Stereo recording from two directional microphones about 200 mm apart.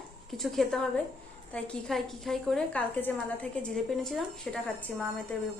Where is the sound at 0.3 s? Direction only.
Centre (ahead or behind).